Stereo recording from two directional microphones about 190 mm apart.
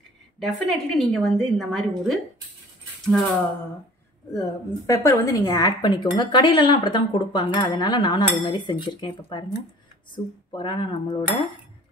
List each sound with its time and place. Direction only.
0.4 s a woman's voice: centre (ahead or behind)
4.3 s a woman's voice: 15° left (ahead or behind)